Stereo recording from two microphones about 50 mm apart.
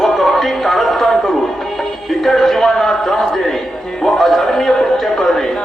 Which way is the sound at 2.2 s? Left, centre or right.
Centre.